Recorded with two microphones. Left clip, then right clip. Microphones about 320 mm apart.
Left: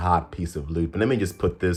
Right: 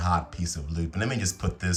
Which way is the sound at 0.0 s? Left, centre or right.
Centre.